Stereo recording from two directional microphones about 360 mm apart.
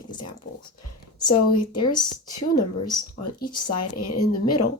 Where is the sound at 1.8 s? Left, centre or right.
Centre.